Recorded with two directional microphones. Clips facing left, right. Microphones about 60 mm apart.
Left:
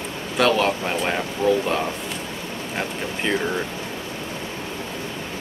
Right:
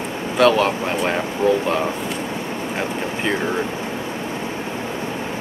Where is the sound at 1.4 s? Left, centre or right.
Right.